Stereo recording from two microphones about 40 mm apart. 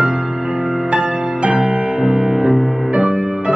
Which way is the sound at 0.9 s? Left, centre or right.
Centre.